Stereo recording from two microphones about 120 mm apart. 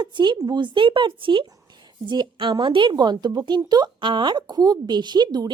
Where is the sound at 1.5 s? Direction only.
35° right (ahead or behind).